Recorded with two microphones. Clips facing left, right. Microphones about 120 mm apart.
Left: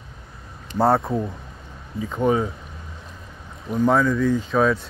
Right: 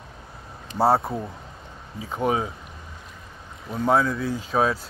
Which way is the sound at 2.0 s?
10° right (ahead or behind).